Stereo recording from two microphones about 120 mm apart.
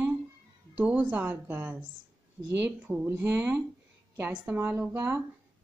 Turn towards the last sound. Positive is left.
turn(degrees=-15)  # may be behind; listen again after turning